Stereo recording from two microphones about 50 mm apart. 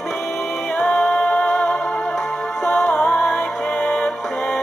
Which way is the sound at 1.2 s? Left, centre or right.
Left.